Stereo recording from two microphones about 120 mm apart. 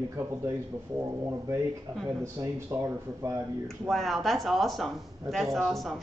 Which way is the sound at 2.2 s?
25° right (ahead or behind).